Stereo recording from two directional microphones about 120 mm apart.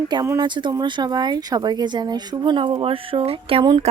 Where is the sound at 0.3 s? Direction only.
40° right (ahead or behind).